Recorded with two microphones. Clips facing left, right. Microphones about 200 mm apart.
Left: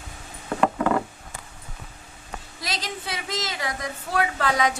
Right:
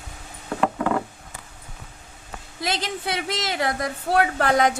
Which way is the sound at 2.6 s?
55° right (ahead or behind).